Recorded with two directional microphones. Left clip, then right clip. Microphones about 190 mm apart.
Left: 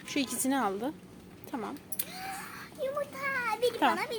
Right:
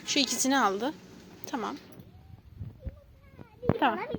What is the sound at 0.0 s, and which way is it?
A woman's voice, centre (ahead or behind).